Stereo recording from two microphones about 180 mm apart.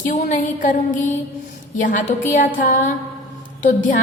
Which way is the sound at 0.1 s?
45° left (ahead or behind).